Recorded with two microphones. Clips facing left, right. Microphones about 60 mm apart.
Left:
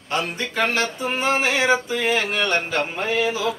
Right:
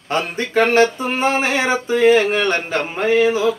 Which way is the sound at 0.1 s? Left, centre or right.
Right.